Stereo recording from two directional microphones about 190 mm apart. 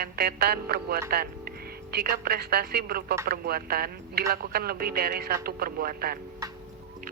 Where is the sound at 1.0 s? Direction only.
55° right (ahead or behind).